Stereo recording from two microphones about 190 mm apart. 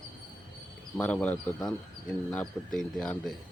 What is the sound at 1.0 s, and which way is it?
Speech, 5° left (ahead or behind).